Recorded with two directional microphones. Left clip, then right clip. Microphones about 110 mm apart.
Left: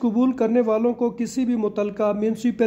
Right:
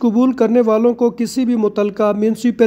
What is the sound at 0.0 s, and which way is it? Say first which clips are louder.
Speech: right 6 dB; 35° right (ahead or behind).